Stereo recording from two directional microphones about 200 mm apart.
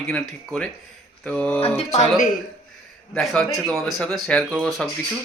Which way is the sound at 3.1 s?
Centre (ahead or behind).